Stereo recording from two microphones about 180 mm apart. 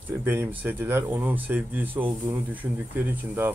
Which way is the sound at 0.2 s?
15° right (ahead or behind).